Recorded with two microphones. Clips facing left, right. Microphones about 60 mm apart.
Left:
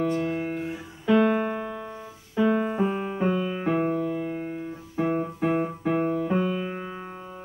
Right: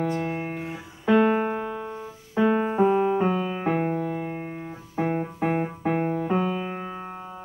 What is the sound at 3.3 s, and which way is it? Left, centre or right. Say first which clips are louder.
Keyboard: even; centre.